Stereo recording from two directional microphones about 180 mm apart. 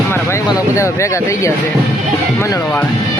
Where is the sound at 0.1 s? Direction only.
15° left (ahead or behind).